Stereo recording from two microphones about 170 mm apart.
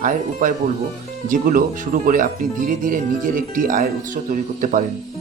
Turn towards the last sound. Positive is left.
turn(degrees=-50)  # may be behind; listen again after turning